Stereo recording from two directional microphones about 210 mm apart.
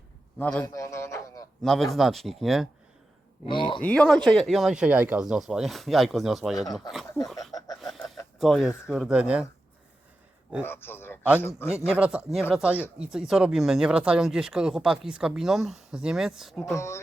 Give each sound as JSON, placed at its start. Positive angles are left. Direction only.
{"t": 0.3, "sound": "a man's voice", "side_deg": 5}
{"t": 0.6, "sound": "a sound", "side_deg": 15}
{"t": 1.6, "sound": "speech", "side_deg": 0}
{"t": 3.4, "sound": "speech", "side_deg": 25}
{"t": 3.8, "sound": "speech", "side_deg": 5}
{"t": 7.8, "sound": "a sound", "side_deg": 0}
{"t": 8.4, "sound": "speech", "side_deg": 0}
{"t": 10.6, "sound": "a man's voice", "side_deg": 10}
{"t": 11.9, "sound": "speech", "side_deg": -5}
{"t": 16.7, "sound": "a man's voice", "side_deg": 15}